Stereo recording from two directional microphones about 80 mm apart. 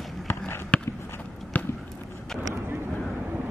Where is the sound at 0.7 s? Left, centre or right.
Centre.